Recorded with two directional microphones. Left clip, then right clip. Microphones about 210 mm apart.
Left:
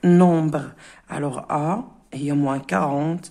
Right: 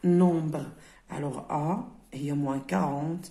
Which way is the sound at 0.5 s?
30° left (ahead or behind).